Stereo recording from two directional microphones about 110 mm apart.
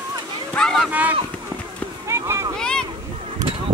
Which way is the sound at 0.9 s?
15° right (ahead or behind).